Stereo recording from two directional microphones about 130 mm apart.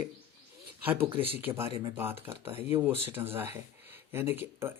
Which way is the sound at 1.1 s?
45° right (ahead or behind).